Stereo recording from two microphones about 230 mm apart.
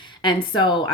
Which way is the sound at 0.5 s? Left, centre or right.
Centre.